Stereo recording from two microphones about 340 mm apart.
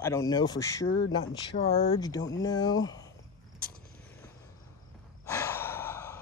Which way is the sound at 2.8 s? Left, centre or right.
Centre.